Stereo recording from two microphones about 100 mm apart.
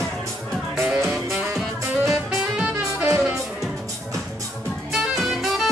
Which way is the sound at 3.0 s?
20° right (ahead or behind).